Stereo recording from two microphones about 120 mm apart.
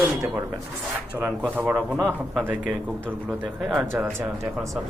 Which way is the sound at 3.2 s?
Centre (ahead or behind).